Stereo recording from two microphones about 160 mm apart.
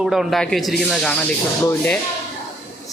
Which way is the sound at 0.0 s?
Centre (ahead or behind).